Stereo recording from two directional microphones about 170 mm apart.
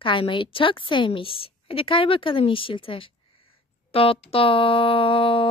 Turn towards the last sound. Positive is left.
turn(degrees=30)  # may be behind; listen again after turning